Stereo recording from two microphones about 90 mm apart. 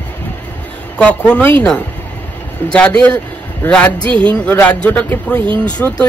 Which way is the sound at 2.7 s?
10° left (ahead or behind).